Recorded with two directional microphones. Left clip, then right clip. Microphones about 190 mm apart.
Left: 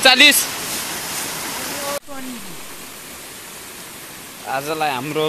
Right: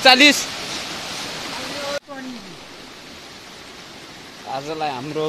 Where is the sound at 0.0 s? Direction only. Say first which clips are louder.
Left 1 dB; centre (ahead or behind).